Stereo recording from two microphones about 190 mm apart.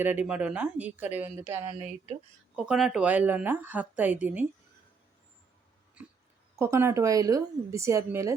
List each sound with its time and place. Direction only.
0.0 s speech: 10° right (ahead or behind)
1.7 s speech: 40° right (ahead or behind)
2.6 s speech: 5° right (ahead or behind)
6.0 s a sound: 5° right (ahead or behind)
6.6 s speech: 15° right (ahead or behind)